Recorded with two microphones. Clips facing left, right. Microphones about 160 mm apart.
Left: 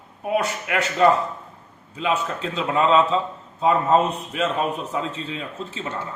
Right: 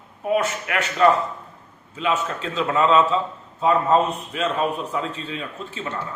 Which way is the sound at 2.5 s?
25° left (ahead or behind).